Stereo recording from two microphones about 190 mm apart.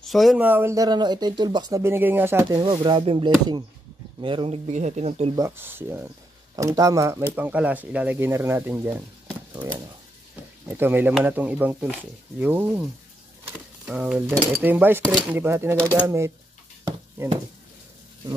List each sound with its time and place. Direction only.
0.0 s speech: centre (ahead or behind)
2.6 s speech: 25° right (ahead or behind)
5.3 s speech: 15° right (ahead or behind)
10.7 s speech: 10° right (ahead or behind)